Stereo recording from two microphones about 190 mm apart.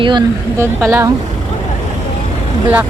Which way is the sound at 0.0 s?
25° right (ahead or behind).